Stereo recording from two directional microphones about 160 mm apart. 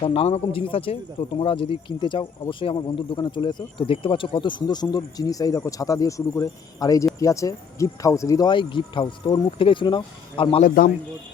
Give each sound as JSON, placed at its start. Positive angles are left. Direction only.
{"t": 0.0, "sound": "speech", "side_deg": 35}
{"t": 10.6, "sound": "a man's voice", "side_deg": 60}